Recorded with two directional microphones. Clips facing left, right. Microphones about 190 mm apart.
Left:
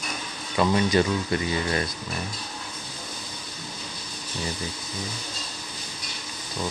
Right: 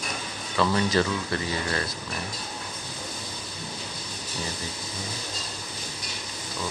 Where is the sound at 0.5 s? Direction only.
15° left (ahead or behind).